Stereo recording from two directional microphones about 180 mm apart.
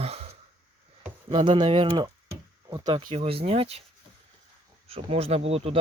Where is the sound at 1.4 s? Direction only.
30° right (ahead or behind).